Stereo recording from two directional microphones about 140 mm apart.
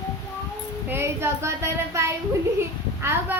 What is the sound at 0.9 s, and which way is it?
A child's voice, 15° right (ahead or behind).